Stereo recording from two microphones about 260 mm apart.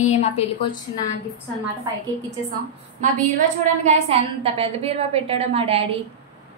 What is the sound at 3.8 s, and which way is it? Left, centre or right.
A woman's voice, right.